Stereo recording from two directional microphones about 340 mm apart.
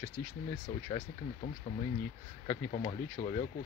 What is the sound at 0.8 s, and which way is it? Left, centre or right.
Speech, centre.